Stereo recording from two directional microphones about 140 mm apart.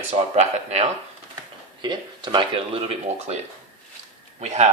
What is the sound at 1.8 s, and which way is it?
Speech, 30° right (ahead or behind).